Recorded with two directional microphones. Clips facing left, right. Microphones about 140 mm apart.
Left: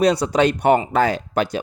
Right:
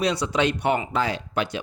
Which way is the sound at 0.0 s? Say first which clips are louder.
Left 6 dB; 40° left (ahead or behind).